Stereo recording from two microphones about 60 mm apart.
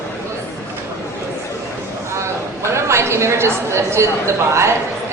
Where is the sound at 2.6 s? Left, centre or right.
Right.